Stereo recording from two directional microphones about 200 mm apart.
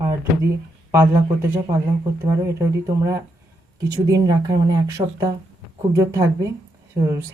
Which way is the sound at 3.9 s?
20° right (ahead or behind).